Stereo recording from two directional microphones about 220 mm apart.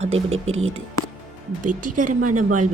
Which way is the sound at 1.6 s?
35° right (ahead or behind).